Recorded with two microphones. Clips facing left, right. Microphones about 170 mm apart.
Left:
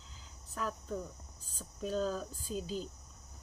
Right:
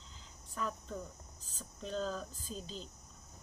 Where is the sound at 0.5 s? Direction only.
Centre (ahead or behind).